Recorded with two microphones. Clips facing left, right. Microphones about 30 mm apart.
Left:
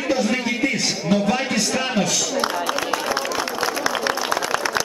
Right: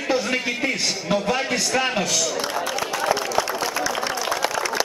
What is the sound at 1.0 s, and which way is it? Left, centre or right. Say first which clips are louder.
Speech: left 2 dB; centre.